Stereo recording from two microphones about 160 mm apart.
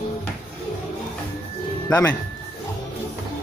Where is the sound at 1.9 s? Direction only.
15° left (ahead or behind).